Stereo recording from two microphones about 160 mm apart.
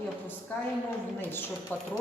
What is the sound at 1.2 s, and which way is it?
Speech, 15° left (ahead or behind).